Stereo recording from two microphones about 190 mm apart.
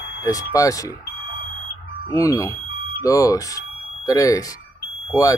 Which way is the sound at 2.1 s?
15° left (ahead or behind).